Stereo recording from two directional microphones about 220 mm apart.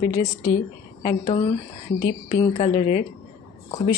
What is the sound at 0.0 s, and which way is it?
Speech, 35° left (ahead or behind).